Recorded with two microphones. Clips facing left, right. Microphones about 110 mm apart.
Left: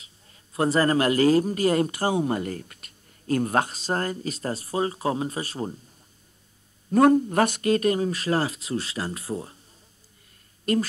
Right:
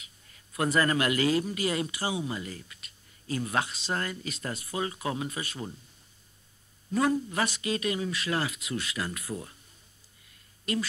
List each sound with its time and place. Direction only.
0.0 s a man's voice: 30° left (ahead or behind)
6.9 s a man's voice: 50° left (ahead or behind); by 9.6 s 30° left (ahead or behind)
10.6 s speech: 45° left (ahead or behind)